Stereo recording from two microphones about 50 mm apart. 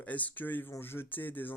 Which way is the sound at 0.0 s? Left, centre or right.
Left.